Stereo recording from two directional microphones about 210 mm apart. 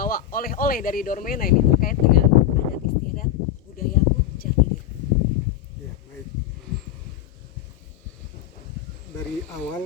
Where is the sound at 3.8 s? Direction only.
45° left (ahead or behind).